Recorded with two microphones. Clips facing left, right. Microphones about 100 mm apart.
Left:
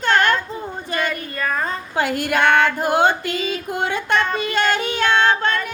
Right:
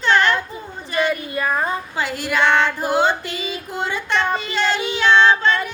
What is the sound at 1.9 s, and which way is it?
Female singing, 50° left (ahead or behind).